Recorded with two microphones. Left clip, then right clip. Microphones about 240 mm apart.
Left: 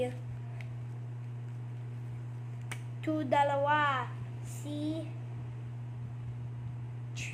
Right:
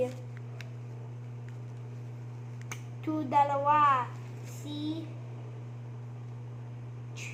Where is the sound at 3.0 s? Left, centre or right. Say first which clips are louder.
Right 2 dB; centre.